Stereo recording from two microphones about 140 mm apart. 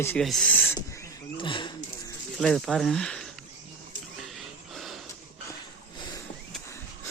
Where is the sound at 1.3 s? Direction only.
35° left (ahead or behind).